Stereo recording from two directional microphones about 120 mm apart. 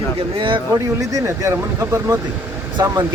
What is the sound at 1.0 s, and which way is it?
Speech, 25° right (ahead or behind).